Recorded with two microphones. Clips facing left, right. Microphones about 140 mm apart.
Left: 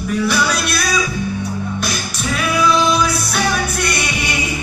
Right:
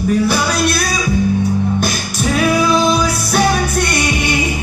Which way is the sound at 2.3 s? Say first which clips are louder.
Right 3 dB; 45° right (ahead or behind).